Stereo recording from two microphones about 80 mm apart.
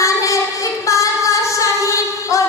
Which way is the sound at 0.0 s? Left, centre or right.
Left.